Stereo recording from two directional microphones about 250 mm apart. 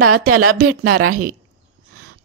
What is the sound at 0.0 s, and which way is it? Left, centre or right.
A woman's voice, right.